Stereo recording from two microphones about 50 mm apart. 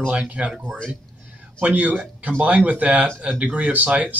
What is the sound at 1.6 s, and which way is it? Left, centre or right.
Speech, right.